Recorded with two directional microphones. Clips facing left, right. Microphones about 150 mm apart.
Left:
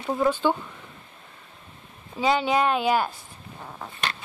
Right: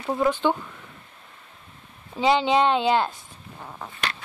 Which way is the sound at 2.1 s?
20° right (ahead or behind).